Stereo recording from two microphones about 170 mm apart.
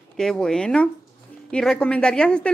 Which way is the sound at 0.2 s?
5° left (ahead or behind).